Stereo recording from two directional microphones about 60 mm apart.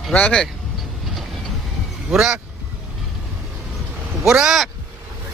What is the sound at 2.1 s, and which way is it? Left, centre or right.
Speech, centre.